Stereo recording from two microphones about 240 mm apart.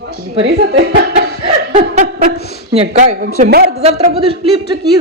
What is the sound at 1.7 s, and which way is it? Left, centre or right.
Chuckle, right.